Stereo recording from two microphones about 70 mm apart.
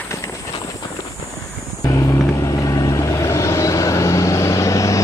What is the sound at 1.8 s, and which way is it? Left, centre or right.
Vehicle, left.